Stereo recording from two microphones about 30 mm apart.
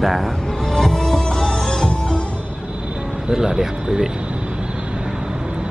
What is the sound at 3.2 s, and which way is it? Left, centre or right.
Speech, centre.